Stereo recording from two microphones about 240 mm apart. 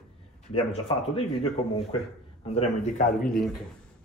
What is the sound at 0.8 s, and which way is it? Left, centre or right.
Speech, left.